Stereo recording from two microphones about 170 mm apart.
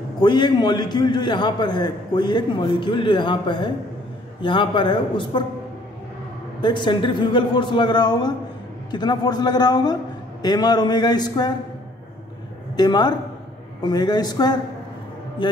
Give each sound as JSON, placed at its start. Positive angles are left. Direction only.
{"t": 0.2, "sound": "a man's voice", "side_deg": 25}
{"t": 6.6, "sound": "a man's voice", "side_deg": 25}
{"t": 12.7, "sound": "a man's voice", "side_deg": 25}